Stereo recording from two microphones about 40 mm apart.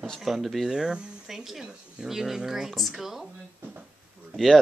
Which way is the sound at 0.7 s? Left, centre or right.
Centre.